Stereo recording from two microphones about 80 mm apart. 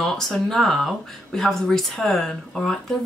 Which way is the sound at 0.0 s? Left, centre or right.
Centre.